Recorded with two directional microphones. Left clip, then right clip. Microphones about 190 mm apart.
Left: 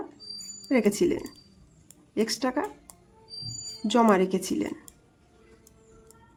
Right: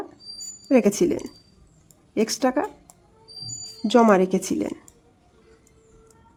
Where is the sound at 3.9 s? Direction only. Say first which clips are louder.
Right 5 dB; 20° right (ahead or behind).